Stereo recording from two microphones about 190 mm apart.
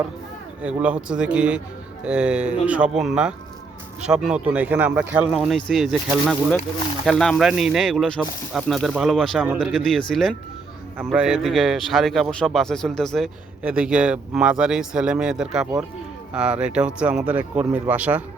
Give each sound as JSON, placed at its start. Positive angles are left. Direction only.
{"t": 0.8, "sound": "a man's voice", "side_deg": -5}